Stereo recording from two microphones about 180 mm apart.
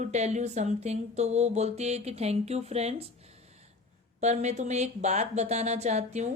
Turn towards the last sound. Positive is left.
turn(degrees=-40)  # may be behind; listen again after turning